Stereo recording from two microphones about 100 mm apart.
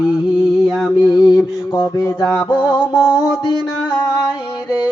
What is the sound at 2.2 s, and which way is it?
Music, 20° left (ahead or behind).